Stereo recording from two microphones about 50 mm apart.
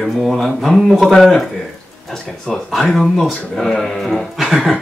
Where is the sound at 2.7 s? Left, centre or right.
Centre.